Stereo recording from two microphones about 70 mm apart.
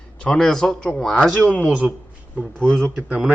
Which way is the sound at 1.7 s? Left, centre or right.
Centre.